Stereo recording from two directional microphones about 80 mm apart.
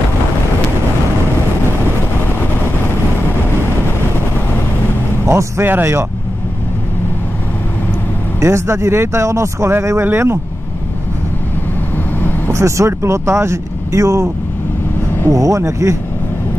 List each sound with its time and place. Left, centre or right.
5.2 s speech: right
8.4 s speech: right
12.4 s speech: right
15.2 s speech: right